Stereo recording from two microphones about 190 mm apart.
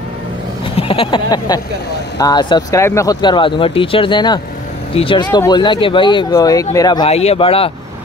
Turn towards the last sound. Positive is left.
turn(degrees=30)  # may be behind; listen again after turning